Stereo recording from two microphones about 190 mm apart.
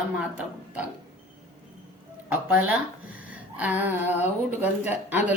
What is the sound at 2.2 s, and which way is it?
Speech, 10° right (ahead or behind).